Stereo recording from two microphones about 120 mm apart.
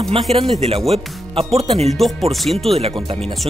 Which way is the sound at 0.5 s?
60° right (ahead or behind).